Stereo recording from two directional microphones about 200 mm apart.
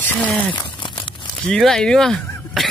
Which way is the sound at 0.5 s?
20° left (ahead or behind).